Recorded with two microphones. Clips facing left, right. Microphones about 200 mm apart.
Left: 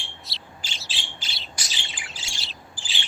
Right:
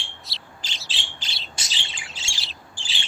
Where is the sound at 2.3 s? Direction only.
Centre (ahead or behind).